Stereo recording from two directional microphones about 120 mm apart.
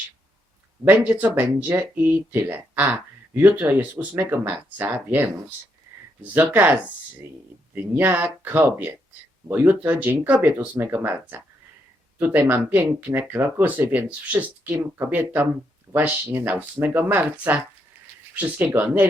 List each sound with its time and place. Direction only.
0.9 s speech: 15° right (ahead or behind)
6.3 s speech: 15° right (ahead or behind)